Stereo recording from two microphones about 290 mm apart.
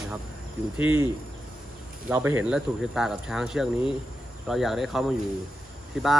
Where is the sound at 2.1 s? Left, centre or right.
Centre.